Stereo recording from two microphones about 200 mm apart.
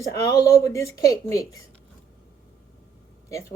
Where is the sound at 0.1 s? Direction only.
15° left (ahead or behind).